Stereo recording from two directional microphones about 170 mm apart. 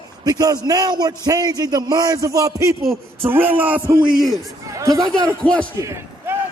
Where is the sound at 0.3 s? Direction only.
20° right (ahead or behind).